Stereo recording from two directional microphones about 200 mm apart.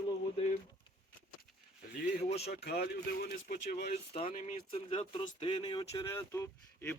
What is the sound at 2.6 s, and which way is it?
Speech, 50° left (ahead or behind).